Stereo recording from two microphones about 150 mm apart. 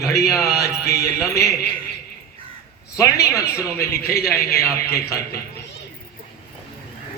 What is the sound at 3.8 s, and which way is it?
Speech, 90° left.